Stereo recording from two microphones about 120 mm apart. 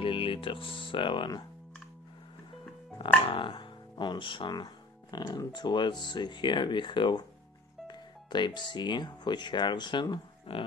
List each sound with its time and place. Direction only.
0.0 s speech: 45° left (ahead or behind)
3.3 s speech: 45° left (ahead or behind)